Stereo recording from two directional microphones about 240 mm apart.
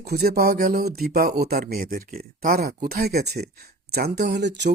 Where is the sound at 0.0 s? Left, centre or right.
Right.